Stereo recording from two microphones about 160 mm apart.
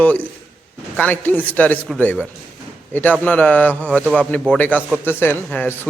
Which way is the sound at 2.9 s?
10° left (ahead or behind).